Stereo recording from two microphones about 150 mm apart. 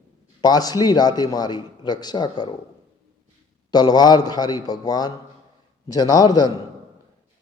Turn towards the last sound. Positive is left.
turn(degrees=25)  # may be behind; listen again after turning